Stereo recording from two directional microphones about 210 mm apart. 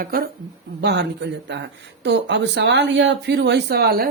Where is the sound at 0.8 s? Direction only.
55° right (ahead or behind).